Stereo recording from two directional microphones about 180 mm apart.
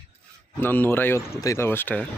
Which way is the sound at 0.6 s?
10° left (ahead or behind).